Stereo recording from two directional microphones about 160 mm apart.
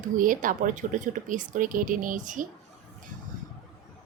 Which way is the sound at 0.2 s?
55° right (ahead or behind).